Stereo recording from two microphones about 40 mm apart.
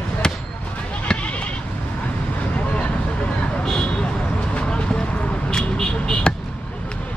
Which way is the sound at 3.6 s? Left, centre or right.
Centre.